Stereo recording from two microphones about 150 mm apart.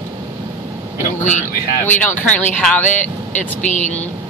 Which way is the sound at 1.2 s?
55° left (ahead or behind).